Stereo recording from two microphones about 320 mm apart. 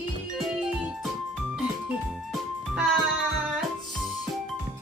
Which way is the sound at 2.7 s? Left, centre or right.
Centre.